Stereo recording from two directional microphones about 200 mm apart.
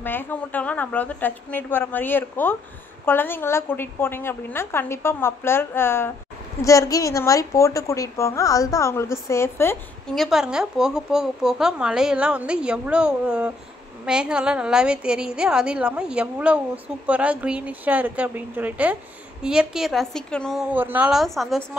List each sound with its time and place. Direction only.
0.0 s a woman's voice: 10° left (ahead or behind)
10.1 s a woman's voice: centre (ahead or behind)
20.7 s a woman's voice: 10° right (ahead or behind)